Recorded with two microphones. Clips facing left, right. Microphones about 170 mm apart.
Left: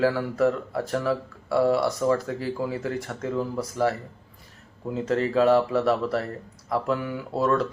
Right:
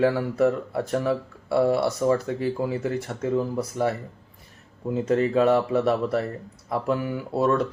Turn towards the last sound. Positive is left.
turn(degrees=-20)  # may be behind; listen again after turning